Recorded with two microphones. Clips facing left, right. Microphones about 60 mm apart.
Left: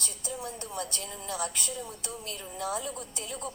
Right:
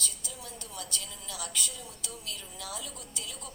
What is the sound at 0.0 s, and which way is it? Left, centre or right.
A woman's voice, left.